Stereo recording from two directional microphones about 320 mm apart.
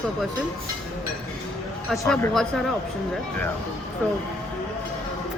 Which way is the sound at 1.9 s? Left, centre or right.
Centre.